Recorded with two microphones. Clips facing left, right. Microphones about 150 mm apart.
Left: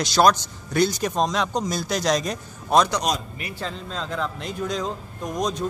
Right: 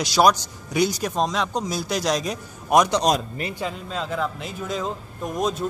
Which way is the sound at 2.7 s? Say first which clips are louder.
Right 1 dB; 15° right (ahead or behind).